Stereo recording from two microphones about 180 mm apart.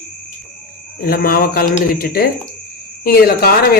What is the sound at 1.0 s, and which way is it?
A woman's voice, 55° left (ahead or behind).